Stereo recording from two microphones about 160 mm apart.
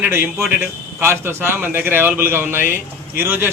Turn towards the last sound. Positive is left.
turn(degrees=-15)  # may be behind; listen again after turning